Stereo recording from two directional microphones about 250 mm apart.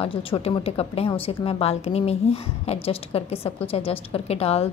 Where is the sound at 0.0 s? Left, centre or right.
Left.